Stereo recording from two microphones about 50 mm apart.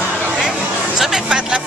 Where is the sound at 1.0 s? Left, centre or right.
Centre.